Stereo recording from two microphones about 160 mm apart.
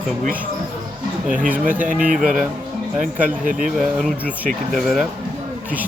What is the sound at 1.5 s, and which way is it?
Speech, 10° right (ahead or behind).